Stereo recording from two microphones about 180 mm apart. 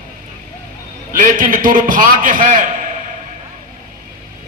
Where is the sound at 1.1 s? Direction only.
50° right (ahead or behind).